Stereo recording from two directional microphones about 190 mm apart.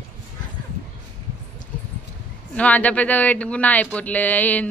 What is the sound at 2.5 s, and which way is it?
A man's voice, 10° left (ahead or behind).